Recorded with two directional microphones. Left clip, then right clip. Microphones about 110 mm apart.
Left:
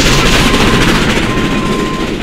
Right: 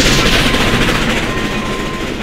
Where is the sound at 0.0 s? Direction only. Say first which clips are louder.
Left 2 dB; 20° left (ahead or behind).